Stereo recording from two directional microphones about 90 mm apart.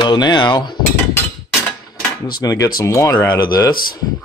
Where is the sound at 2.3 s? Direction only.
45° left (ahead or behind).